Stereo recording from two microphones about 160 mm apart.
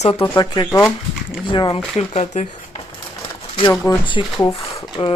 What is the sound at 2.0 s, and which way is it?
Speech, 45° left (ahead or behind).